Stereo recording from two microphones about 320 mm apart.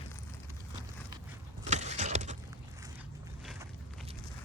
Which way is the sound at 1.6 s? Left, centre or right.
Right.